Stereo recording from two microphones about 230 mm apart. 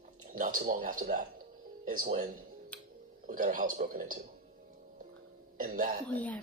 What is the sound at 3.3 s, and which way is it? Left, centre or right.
Speech, right.